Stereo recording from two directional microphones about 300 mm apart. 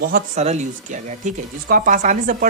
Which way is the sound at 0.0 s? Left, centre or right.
Right.